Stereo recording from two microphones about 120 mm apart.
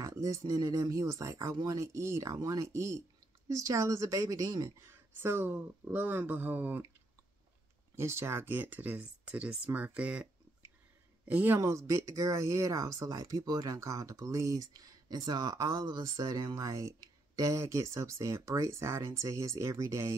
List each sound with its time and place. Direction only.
0.0 s speech: 25° right (ahead or behind)
7.9 s speech: 20° right (ahead or behind)
11.2 s speech: 15° right (ahead or behind)